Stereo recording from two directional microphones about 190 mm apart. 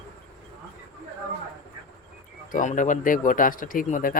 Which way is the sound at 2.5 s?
45° left (ahead or behind).